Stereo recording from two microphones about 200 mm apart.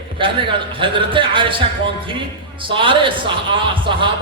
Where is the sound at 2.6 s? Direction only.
25° right (ahead or behind).